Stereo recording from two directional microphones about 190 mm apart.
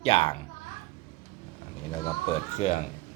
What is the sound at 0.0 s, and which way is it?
Speech, 30° left (ahead or behind).